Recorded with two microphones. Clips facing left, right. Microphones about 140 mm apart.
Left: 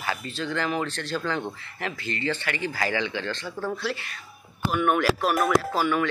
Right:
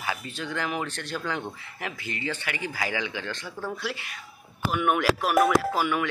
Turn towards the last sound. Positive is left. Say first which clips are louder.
# left 1 dB
turn(degrees=-15)  # may be behind; listen again after turning